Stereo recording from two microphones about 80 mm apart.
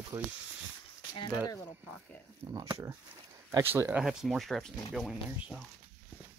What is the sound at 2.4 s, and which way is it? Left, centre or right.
Speech, right.